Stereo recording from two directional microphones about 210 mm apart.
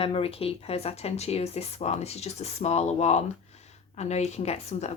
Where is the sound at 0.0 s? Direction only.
25° left (ahead or behind).